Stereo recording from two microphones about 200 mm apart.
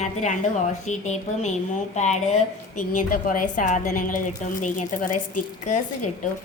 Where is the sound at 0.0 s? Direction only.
35° left (ahead or behind).